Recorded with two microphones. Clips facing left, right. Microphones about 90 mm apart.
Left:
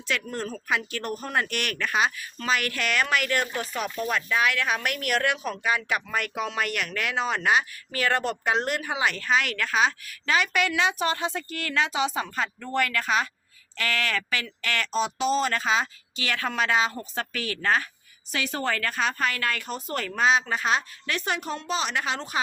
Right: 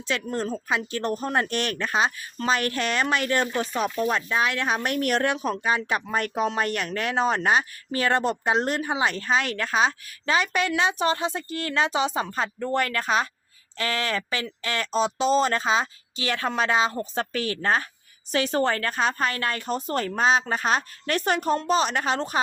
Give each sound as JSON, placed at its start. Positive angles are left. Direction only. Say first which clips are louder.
{"t": 0.1, "sound": "a woman's voice", "louder": "right 3 dB", "side_deg": -25}